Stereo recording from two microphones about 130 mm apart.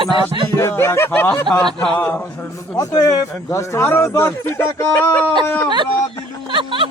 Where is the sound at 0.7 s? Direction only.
20° left (ahead or behind).